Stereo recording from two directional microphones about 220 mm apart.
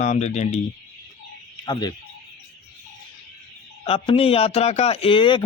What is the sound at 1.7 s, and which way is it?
Speech, 20° left (ahead or behind).